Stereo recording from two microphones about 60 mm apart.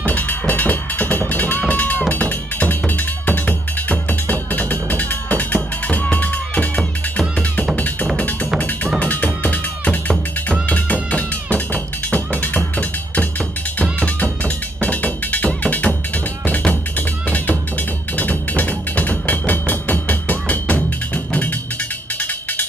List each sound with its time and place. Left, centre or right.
0.0 s music: left
4.1 s music: left
18.1 s music: left